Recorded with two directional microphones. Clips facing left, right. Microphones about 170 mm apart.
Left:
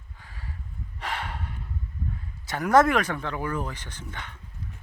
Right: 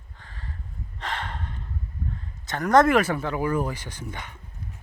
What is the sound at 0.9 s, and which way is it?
Snort, 10° left (ahead or behind).